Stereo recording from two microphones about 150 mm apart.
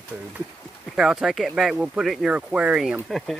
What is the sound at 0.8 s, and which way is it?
Speech, 5° right (ahead or behind).